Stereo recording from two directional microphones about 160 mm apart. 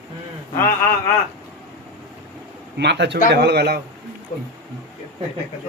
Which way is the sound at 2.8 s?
90° right.